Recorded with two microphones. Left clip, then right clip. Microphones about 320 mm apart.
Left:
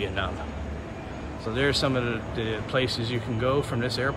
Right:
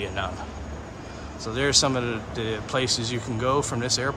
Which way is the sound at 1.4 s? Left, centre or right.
Centre.